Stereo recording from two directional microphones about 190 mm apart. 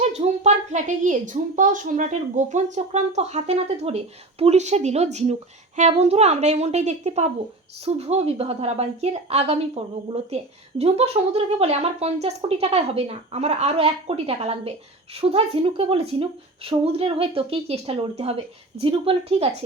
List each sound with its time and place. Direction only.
0.1 s a woman's voice: 40° right (ahead or behind)